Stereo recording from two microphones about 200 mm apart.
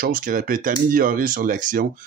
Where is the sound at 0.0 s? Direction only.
45° right (ahead or behind).